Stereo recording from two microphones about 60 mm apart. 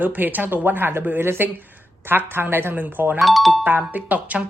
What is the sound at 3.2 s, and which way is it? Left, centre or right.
Speech, centre.